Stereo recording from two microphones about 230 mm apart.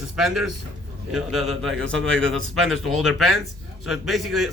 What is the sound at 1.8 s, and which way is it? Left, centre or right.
Speech, right.